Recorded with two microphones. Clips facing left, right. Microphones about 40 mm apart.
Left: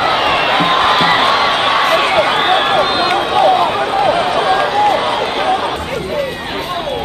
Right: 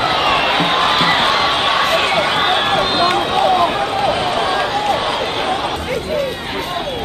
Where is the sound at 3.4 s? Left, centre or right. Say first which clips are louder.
Left 3 dB; centre.